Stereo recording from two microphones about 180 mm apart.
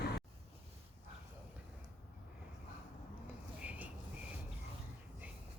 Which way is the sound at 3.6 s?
5° right (ahead or behind).